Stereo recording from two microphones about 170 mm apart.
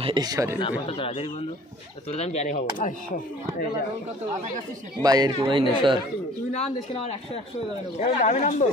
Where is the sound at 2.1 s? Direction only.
40° left (ahead or behind).